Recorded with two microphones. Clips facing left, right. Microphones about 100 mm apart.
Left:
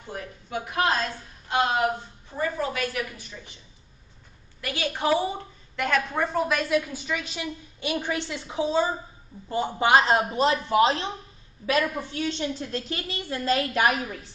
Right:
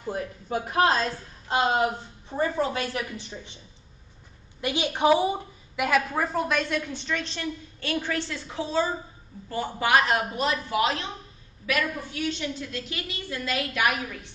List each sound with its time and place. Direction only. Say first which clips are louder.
0.0 s a woman's voice: right 5 dB; 40° right (ahead or behind)
2.3 s a woman's voice: right 2 dB; 30° right (ahead or behind)
4.6 s a woman's voice: right 3 dB; 20° right (ahead or behind); by 14.3 s 35° left (ahead or behind)